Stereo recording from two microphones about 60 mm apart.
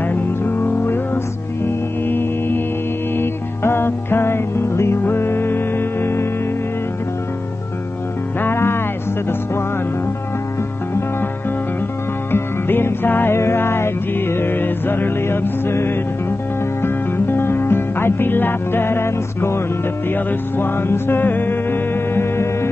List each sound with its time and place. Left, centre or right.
0.1 s music: left
8.4 s music: left
12.3 s music: left